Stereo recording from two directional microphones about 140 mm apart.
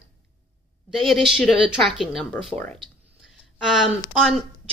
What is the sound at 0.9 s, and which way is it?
A woman's voice, centre (ahead or behind).